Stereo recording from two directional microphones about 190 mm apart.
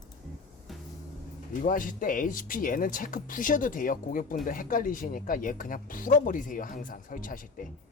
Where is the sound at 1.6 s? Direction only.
45° left (ahead or behind).